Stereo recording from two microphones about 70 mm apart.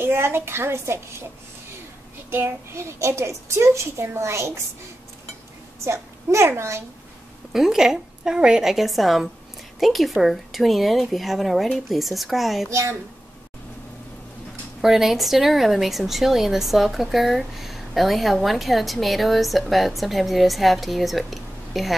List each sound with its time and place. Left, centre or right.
0.0 s a child's voice: right
2.3 s a child's voice: right
5.9 s a child's voice: right
7.5 s a woman's voice: centre
12.6 s a child's voice: right
14.8 s a woman's voice: centre